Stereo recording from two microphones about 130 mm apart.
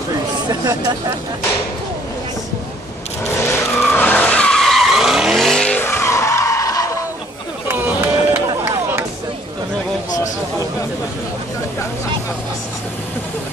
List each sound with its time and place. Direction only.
0.5 s speech: 30° right (ahead or behind)
3.3 s vehicle: 20° left (ahead or behind)
7.6 s a sound: 15° right (ahead or behind)